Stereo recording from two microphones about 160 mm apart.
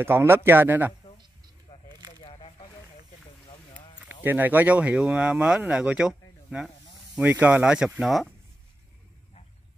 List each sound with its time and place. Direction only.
0.0 s speech: 15° right (ahead or behind)
1.7 s a sound: 30° left (ahead or behind)
4.0 s speech: 10° right (ahead or behind)